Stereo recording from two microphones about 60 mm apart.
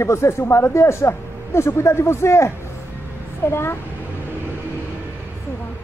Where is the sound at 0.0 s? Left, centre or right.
Left.